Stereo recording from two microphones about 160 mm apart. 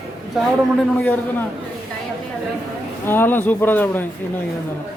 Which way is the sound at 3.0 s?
15° left (ahead or behind).